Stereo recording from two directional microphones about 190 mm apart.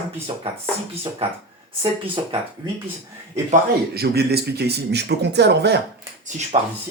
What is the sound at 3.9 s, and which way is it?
A man's voice, 55° right (ahead or behind).